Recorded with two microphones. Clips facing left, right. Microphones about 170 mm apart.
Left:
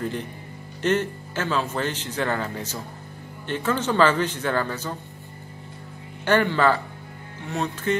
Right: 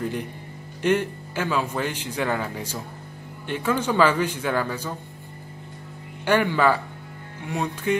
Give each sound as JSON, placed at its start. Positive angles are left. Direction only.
{"t": 0.8, "sound": "speech", "side_deg": -10}
{"t": 6.2, "sound": "speech", "side_deg": -10}